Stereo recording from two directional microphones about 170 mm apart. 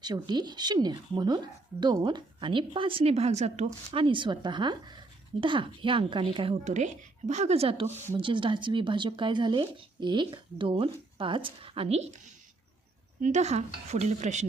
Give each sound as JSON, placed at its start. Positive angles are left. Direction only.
{"t": 0.0, "sound": "a woman's voice", "side_deg": -25}